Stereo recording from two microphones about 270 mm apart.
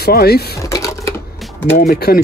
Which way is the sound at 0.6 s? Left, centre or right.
Centre.